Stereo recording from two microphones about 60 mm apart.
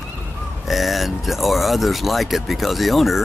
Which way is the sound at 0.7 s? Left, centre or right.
Centre.